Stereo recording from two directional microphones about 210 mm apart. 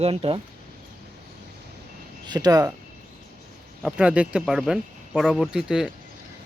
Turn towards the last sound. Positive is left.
turn(degrees=0)  # may be behind; listen again after turning